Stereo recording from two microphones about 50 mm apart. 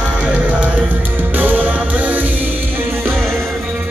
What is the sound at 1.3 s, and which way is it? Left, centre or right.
Music, right.